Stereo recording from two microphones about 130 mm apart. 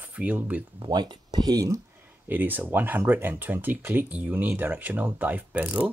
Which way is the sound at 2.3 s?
15° right (ahead or behind).